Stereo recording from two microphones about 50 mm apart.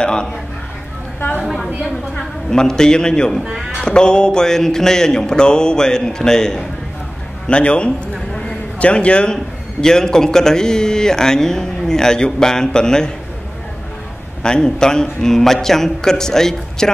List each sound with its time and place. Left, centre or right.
0.0 s a sound: centre
1.4 s a sound: centre
2.1 s a man's voice: centre
3.4 s speech: centre
3.8 s a man's voice: centre
14.4 s a man's voice: centre